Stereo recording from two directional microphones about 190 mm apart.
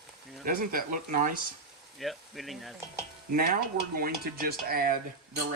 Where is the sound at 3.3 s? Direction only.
50° right (ahead or behind).